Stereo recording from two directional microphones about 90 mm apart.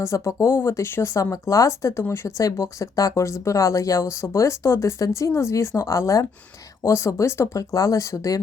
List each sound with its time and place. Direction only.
0.0 s speech: 35° left (ahead or behind)